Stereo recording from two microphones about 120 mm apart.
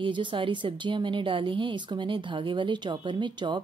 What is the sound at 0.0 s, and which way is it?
A woman's voice, 40° right (ahead or behind).